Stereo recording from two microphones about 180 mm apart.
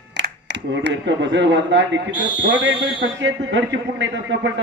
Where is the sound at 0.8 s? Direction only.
80° right.